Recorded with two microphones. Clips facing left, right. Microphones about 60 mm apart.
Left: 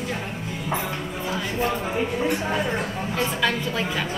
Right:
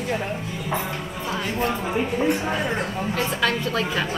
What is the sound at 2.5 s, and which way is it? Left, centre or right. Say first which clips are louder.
Speech: even; right.